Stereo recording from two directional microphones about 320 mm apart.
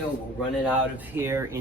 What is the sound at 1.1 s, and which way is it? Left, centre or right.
Speech, centre.